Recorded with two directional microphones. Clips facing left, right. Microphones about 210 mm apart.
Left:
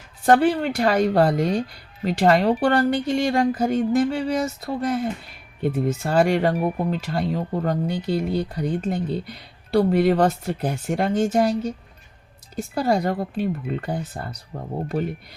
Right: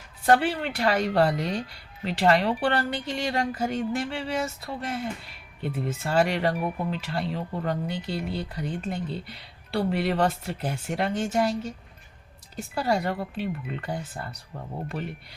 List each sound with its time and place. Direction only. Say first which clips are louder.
0.3 s speech: left 5 dB; 45° left (ahead or behind)
6.5 s speech: left 5 dB; 30° left (ahead or behind)
12.7 s speech: left 5 dB; 40° left (ahead or behind)